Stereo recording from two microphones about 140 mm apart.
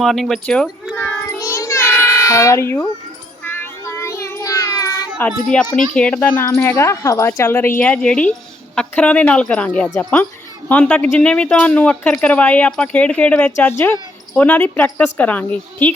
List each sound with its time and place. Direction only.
0.0 s a sound: centre (ahead or behind)
1.4 s child singing: 25° left (ahead or behind)
5.5 s a child's voice: 5° left (ahead or behind)